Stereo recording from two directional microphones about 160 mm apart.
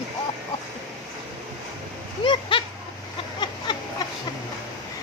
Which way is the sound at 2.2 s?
30° left (ahead or behind).